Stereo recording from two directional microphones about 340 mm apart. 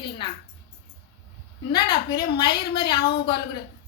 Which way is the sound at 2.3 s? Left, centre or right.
Centre.